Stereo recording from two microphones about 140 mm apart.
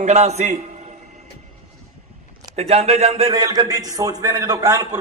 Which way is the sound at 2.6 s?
50° right (ahead or behind).